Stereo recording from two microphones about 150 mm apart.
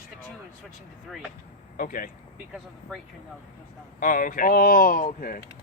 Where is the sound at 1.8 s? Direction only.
65° left (ahead or behind).